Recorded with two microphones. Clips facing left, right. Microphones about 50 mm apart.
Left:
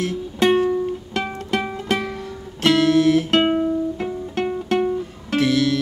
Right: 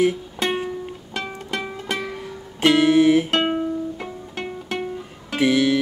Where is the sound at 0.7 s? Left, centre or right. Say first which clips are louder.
Left 9 dB; centre.